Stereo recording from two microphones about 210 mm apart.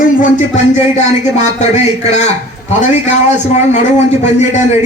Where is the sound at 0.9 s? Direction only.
35° left (ahead or behind).